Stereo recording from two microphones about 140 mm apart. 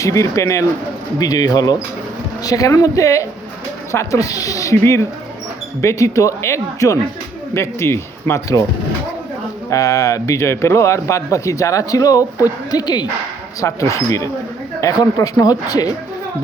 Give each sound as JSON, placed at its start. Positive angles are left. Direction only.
{"t": 0.0, "sound": "speech", "side_deg": 25}
{"t": 9.6, "sound": "speech", "side_deg": 25}